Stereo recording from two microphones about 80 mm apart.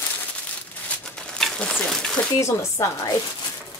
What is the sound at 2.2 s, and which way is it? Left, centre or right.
Speech, left.